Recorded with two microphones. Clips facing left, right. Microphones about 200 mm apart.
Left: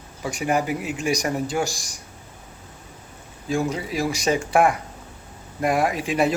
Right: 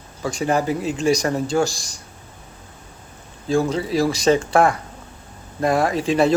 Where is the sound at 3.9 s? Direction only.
35° right (ahead or behind).